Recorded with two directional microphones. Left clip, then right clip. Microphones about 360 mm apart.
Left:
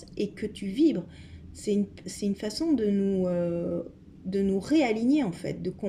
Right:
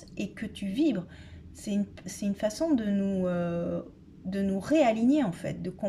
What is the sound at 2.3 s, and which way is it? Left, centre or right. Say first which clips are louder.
A woman's voice: right 1 dB; right.